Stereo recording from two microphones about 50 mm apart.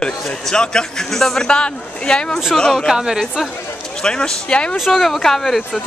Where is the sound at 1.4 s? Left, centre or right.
Centre.